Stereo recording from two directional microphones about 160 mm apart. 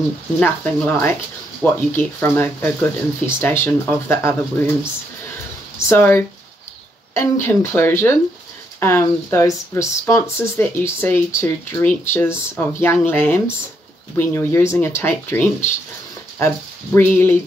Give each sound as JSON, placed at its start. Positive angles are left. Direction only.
{"t": 0.4, "sound": "speech", "side_deg": 10}
{"t": 5.9, "sound": "speech", "side_deg": 15}